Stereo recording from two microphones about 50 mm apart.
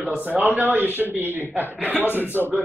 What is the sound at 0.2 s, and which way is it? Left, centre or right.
A man's voice, right.